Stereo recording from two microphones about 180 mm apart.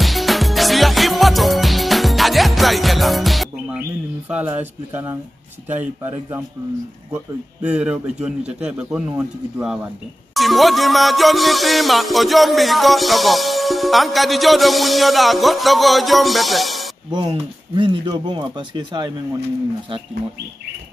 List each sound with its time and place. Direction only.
0.0 s music: centre (ahead or behind)
4.3 s a man's voice: 10° right (ahead or behind)
7.6 s a man's voice: 5° right (ahead or behind)
10.3 s music: centre (ahead or behind)
17.1 s speech: 25° right (ahead or behind)